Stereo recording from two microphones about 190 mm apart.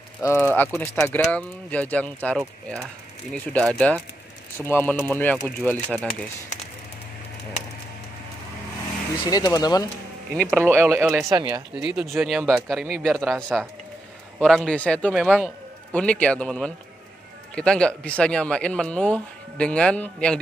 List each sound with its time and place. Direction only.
0.2 s speech: 15° left (ahead or behind)
9.2 s speech: 20° left (ahead or behind)
10.5 s speech: 10° right (ahead or behind)
11.7 s a man's voice: 5° right (ahead or behind)